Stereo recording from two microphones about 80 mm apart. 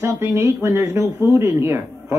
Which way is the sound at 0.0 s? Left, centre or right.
Right.